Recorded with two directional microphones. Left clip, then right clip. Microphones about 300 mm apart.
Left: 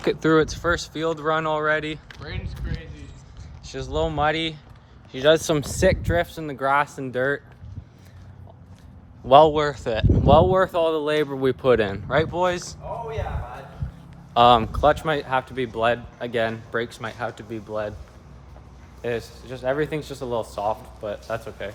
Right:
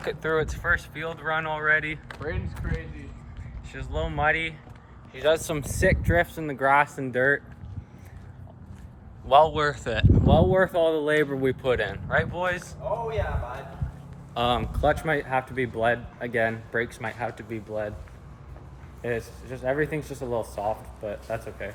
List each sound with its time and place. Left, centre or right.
0.0 s speech: left
0.7 s speech: centre
2.0 s speech: centre
3.7 s speech: centre
5.1 s speech: left
5.8 s speech: centre
9.2 s speech: left
9.6 s speech: centre
10.1 s speech: left
10.3 s speech: centre
11.6 s speech: left
13.1 s speech: centre
14.3 s speech: left
19.0 s speech: centre